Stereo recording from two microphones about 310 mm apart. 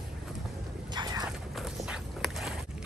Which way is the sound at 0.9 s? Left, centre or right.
Centre.